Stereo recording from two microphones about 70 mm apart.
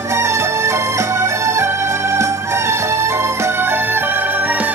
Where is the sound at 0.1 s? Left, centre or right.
Right.